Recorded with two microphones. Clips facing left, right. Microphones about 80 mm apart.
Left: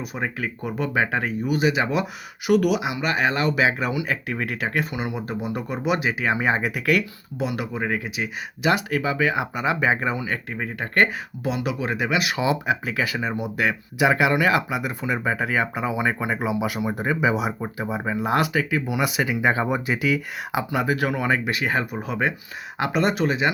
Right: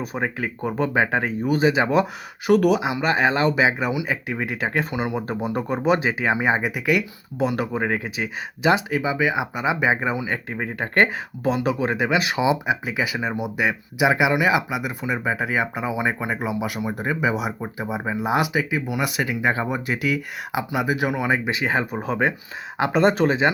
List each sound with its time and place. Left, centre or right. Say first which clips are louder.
0.0 s speech: right 2 dB; right
7.3 s speech: right 4 dB; right; by 10.2 s centre
10.2 s speech: right 1 dB; right
12.4 s speech: right 2 dB; centre
18.9 s speech: left 1 dB; centre; by 22.0 s right
22.0 s speech: right 3 dB; right